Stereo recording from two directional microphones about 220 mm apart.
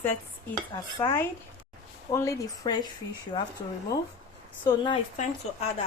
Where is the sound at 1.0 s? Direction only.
10° left (ahead or behind).